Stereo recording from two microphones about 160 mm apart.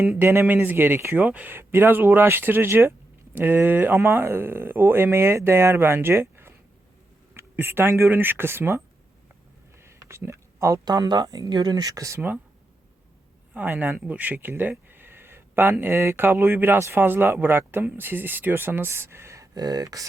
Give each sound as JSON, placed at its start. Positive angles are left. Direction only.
{"t": 0.2, "sound": "speech", "side_deg": -15}
{"t": 9.8, "sound": "speech", "side_deg": -15}
{"t": 13.5, "sound": "speech", "side_deg": -10}